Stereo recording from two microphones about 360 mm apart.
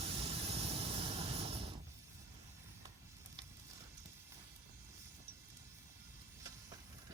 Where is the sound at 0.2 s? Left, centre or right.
Centre.